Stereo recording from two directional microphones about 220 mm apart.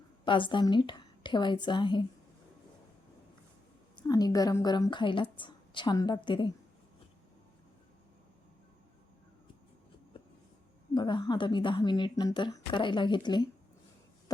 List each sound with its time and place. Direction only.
0.3 s a woman's voice: 20° left (ahead or behind)
3.9 s a woman's voice: 15° left (ahead or behind)
10.9 s a woman's voice: 20° left (ahead or behind)
14.3 s cough: 15° left (ahead or behind)